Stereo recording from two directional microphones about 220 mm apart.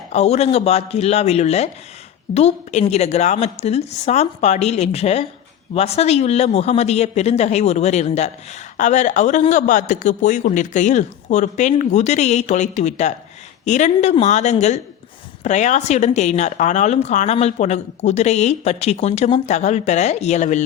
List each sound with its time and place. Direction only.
0.1 s a woman's voice: 30° left (ahead or behind)